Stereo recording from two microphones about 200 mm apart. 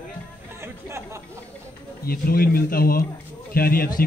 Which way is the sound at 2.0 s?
50° left (ahead or behind).